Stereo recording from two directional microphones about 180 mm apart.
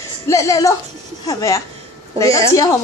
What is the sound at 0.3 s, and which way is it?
Speech, 15° left (ahead or behind).